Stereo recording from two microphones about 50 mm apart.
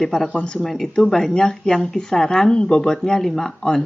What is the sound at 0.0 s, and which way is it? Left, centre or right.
Speech, centre.